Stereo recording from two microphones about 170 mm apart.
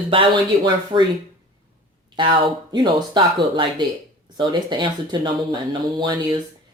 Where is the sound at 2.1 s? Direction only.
30° right (ahead or behind).